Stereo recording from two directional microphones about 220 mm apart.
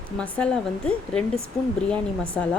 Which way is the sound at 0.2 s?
5° left (ahead or behind).